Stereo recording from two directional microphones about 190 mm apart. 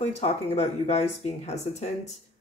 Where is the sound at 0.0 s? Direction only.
35° left (ahead or behind).